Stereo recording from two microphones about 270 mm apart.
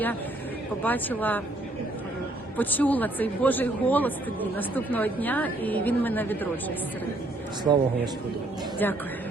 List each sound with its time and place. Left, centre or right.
0.8 s a man's voice: centre
2.6 s a man's voice: centre
7.6 s a man's voice: centre
8.8 s a man's voice: centre